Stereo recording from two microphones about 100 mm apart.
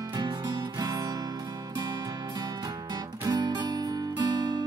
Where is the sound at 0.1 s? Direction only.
45° right (ahead or behind).